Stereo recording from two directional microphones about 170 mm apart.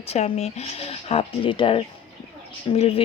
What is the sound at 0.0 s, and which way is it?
Speech, 35° left (ahead or behind).